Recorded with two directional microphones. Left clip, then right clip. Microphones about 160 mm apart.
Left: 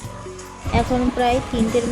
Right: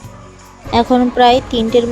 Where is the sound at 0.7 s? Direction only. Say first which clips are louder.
Right 8 dB; 50° right (ahead or behind).